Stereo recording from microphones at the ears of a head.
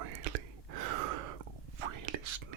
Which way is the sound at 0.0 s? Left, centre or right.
Right.